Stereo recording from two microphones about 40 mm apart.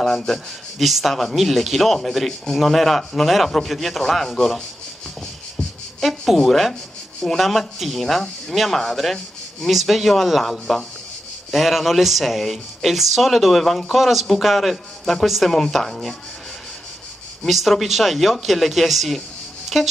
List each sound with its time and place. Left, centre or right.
0.3 s speech: centre
5.6 s insect: left
5.9 s speech: centre
17.5 s speech: centre